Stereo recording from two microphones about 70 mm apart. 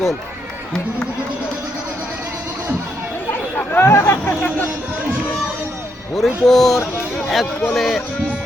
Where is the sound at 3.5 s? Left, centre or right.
Left.